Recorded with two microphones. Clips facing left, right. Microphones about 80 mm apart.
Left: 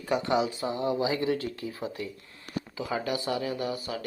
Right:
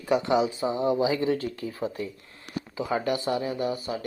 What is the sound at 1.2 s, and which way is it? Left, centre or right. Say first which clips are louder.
Speech: right 2 dB; right.